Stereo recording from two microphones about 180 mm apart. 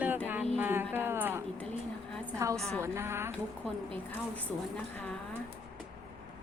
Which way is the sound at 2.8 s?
15° right (ahead or behind).